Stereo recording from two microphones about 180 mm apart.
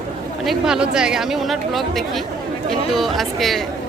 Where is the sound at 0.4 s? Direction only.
5° right (ahead or behind).